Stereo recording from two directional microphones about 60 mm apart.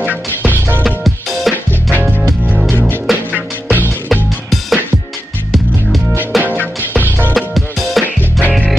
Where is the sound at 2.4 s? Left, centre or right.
Right.